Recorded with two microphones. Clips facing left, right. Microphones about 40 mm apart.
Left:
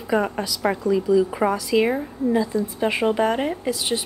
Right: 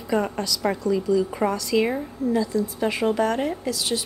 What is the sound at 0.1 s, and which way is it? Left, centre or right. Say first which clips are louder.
A woman's voice: left 2 dB; centre.